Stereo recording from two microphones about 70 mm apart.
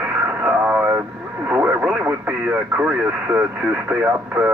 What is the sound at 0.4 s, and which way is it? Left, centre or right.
Radio, right.